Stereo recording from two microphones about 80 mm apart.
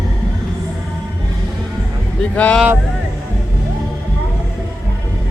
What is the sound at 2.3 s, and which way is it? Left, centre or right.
Speech, centre.